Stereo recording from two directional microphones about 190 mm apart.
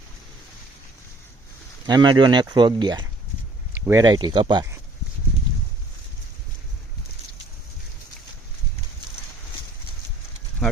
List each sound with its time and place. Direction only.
1.9 s speech: 25° right (ahead or behind)
3.7 s speech: 10° right (ahead or behind)